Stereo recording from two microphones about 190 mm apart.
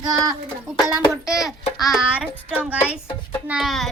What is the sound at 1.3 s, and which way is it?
Child singing, centre (ahead or behind).